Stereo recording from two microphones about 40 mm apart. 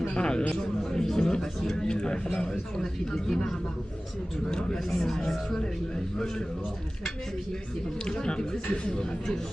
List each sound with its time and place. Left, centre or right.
0.1 s a man's voice: left
4.5 s a man's voice: centre
8.0 s speech: left